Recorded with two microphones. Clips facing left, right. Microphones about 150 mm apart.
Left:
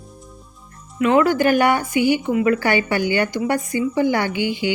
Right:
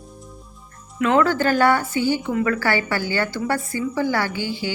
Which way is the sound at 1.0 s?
15° left (ahead or behind).